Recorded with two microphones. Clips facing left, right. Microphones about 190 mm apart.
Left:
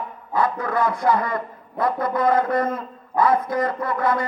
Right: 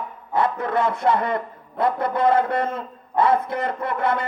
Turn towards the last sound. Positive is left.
turn(degrees=-25)  # may be behind; listen again after turning